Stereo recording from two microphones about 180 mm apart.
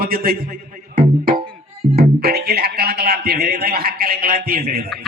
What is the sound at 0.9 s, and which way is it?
Music, 50° right (ahead or behind).